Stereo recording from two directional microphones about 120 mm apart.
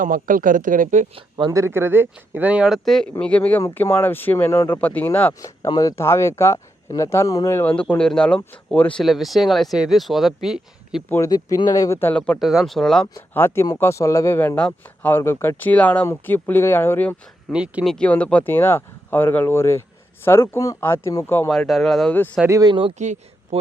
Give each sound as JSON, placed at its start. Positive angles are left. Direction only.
{"t": 0.0, "sound": "speech", "side_deg": -90}
{"t": 1.5, "sound": "speech", "side_deg": -25}
{"t": 5.4, "sound": "speech", "side_deg": 30}
{"t": 7.6, "sound": "speech", "side_deg": 10}
{"t": 11.3, "sound": "speech", "side_deg": 30}
{"t": 12.1, "sound": "speech", "side_deg": 10}
{"t": 12.4, "sound": "speech", "side_deg": -5}
{"t": 13.1, "sound": "speech", "side_deg": 20}
{"t": 17.5, "sound": "speech", "side_deg": -5}
{"t": 17.8, "sound": "speech", "side_deg": 10}
{"t": 21.5, "sound": "speech", "side_deg": 0}
{"t": 22.4, "sound": "speech", "side_deg": -25}
{"t": 23.0, "sound": "speech", "side_deg": -75}